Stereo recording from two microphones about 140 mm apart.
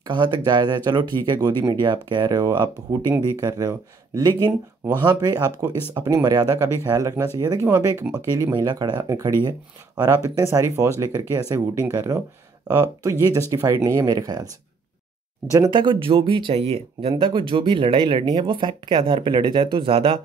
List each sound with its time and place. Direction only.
0.0 s speech: 30° right (ahead or behind)
7.7 s speech: 15° right (ahead or behind)
8.5 s speech: 30° right (ahead or behind)
12.6 s speech: 20° right (ahead or behind)
15.5 s speech: 30° right (ahead or behind)